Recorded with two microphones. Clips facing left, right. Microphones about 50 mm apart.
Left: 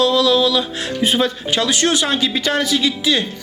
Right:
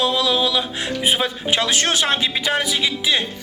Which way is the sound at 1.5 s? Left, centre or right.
Right.